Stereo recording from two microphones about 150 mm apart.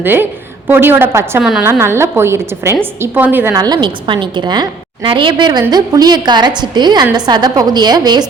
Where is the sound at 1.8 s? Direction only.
15° right (ahead or behind).